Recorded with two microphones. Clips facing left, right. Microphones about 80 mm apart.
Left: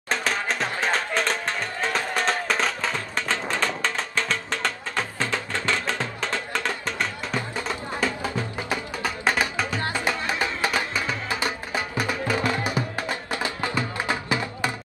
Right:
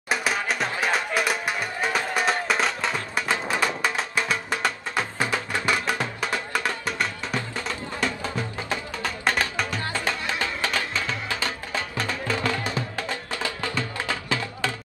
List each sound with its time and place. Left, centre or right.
0.1 s music: centre
8.2 s music: centre